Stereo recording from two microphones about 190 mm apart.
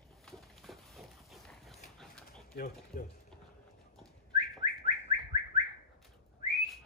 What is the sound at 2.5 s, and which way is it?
Speech, 45° left (ahead or behind).